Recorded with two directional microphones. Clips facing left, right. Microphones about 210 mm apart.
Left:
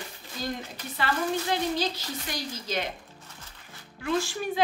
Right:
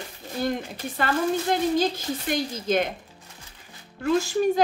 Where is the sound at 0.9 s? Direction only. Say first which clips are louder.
Right 4 dB; 50° right (ahead or behind).